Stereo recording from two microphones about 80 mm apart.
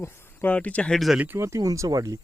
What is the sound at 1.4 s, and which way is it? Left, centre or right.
Speech, right.